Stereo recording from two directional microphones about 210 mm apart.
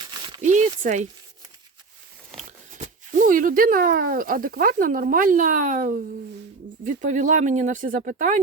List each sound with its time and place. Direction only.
0.4 s speech: 35° right (ahead or behind)
2.4 s speech: 35° right (ahead or behind)